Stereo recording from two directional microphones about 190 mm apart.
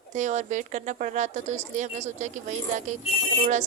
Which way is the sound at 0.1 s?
40° right (ahead or behind).